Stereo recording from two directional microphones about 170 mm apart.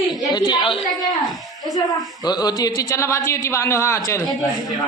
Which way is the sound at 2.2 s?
25° left (ahead or behind).